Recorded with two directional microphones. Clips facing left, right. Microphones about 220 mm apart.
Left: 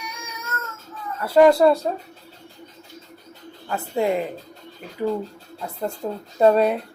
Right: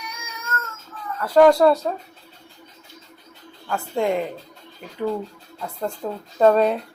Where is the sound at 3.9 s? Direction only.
5° left (ahead or behind).